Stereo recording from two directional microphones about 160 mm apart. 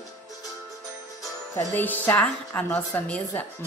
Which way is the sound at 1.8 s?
10° left (ahead or behind).